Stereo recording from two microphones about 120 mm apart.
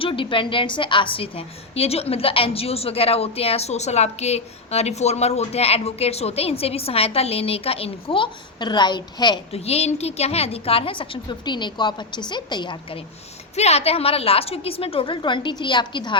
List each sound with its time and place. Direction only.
0.0 s a woman's voice: 45° left (ahead or behind)
9.5 s a woman's voice: 60° left (ahead or behind); by 13.0 s 40° left (ahead or behind)
13.6 s a woman's voice: 60° left (ahead or behind); by 16.1 s 40° left (ahead or behind)